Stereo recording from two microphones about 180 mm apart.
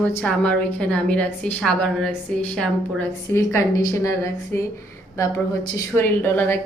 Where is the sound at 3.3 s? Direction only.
15° left (ahead or behind).